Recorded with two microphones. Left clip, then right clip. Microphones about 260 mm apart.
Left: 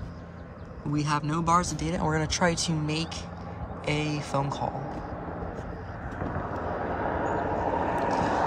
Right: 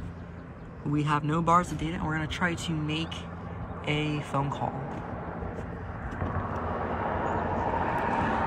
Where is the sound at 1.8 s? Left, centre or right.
Left.